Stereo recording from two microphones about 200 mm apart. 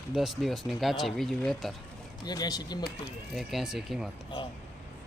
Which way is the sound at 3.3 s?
Centre (ahead or behind).